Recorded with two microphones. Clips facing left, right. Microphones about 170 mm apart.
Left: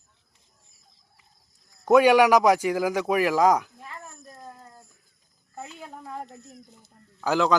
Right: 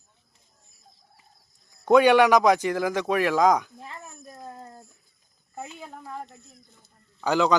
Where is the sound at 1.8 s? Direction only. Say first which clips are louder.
Even; 5° left (ahead or behind).